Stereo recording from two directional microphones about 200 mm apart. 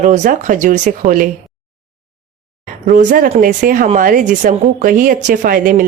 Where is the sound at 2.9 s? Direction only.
40° right (ahead or behind).